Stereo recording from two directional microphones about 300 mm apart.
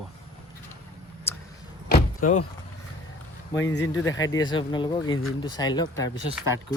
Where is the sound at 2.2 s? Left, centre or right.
Left.